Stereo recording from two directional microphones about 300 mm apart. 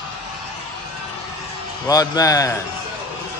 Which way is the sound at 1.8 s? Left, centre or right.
Centre.